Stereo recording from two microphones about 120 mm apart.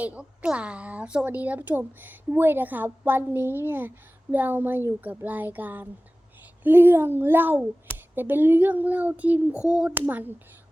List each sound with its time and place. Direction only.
0.0 s a woman's voice: 10° right (ahead or behind)